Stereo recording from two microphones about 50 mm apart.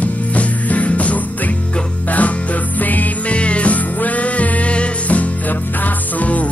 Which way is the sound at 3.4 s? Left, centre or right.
Left.